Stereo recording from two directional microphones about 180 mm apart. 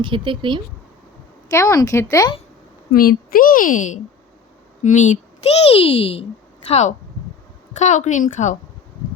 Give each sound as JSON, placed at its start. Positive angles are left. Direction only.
{"t": 0.0, "sound": "speech", "side_deg": -25}
{"t": 1.5, "sound": "speech", "side_deg": 15}
{"t": 2.9, "sound": "a woman's voice", "side_deg": 55}